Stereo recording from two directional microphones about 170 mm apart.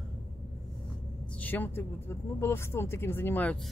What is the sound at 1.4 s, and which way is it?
Speech, 10° left (ahead or behind).